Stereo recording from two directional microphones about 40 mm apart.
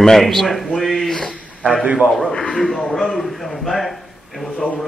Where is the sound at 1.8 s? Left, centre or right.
Right.